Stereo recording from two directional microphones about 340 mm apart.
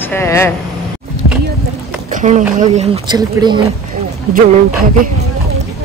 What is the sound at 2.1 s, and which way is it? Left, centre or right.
A woman's voice, right.